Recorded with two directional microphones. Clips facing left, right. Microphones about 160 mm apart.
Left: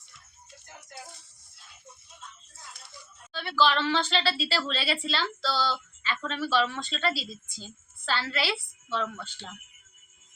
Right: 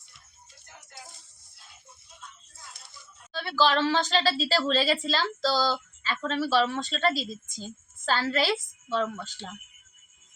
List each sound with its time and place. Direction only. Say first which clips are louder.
3.3 s a woman's voice: right 1 dB; 40° right (ahead or behind)